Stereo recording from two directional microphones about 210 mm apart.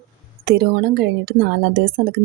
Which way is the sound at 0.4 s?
50° right (ahead or behind).